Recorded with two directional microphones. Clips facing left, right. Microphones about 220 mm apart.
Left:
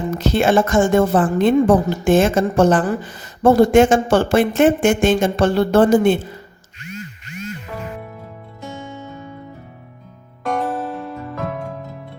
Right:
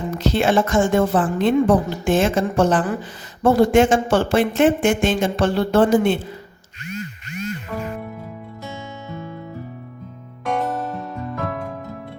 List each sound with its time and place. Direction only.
0.2 s speech: 45° left (ahead or behind)
10.6 s music: centre (ahead or behind)